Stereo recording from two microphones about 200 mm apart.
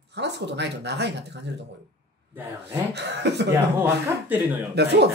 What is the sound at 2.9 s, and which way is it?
Speech, 60° right (ahead or behind).